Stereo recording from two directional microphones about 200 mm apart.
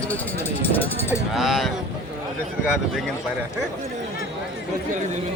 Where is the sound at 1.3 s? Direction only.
Centre (ahead or behind).